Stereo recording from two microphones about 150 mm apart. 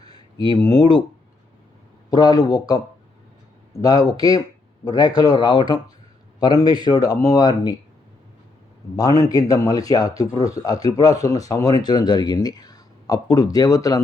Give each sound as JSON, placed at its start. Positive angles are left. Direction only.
{"t": 0.0, "sound": "a sound", "side_deg": 25}
{"t": 2.0, "sound": "speech", "side_deg": 25}
{"t": 9.0, "sound": "speech", "side_deg": 25}